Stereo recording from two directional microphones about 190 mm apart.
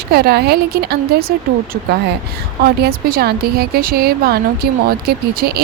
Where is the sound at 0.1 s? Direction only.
55° right (ahead or behind).